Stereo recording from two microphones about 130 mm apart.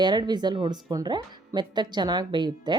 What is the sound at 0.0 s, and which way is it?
Speech, 35° right (ahead or behind).